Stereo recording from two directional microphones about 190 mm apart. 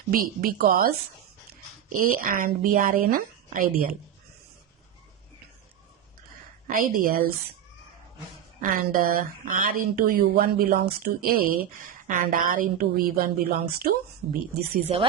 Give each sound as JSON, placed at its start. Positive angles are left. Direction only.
{"t": 0.1, "sound": "a woman's voice", "side_deg": -50}
{"t": 6.7, "sound": "a woman's voice", "side_deg": -50}
{"t": 8.6, "sound": "a woman's voice", "side_deg": -50}
{"t": 14.9, "sound": "speech", "side_deg": -35}